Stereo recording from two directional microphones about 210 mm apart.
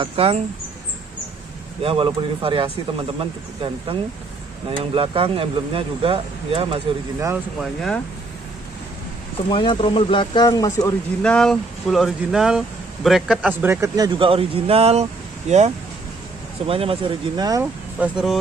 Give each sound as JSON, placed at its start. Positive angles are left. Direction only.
{"t": 0.0, "sound": "speech", "side_deg": -25}
{"t": 1.8, "sound": "speech", "side_deg": -25}
{"t": 9.5, "sound": "speech", "side_deg": 20}
{"t": 11.2, "sound": "speech", "side_deg": 5}
{"t": 17.9, "sound": "speech", "side_deg": -5}